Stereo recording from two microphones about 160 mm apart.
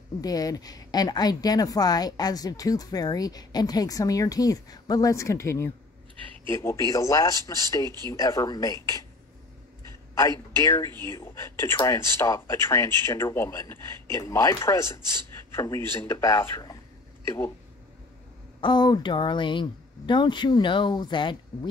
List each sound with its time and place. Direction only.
0.2 s a woman's voice: 25° left (ahead or behind)
10.1 s a man's voice: 20° left (ahead or behind)
18.6 s a woman's voice: 25° left (ahead or behind)